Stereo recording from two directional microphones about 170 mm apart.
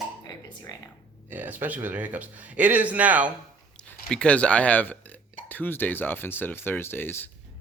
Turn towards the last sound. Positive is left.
turn(degrees=15)  # may be behind; listen again after turning